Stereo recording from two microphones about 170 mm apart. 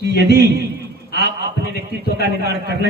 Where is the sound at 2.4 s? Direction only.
70° right (ahead or behind).